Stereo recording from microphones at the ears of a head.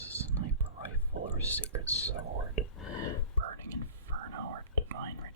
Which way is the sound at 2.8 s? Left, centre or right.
Left.